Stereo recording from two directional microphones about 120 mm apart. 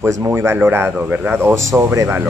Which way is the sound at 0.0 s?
20° right (ahead or behind).